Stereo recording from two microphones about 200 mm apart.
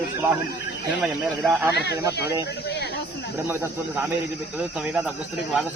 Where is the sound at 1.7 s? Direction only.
55° left (ahead or behind).